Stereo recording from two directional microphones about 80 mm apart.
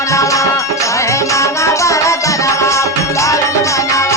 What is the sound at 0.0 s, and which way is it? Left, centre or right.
Music, left.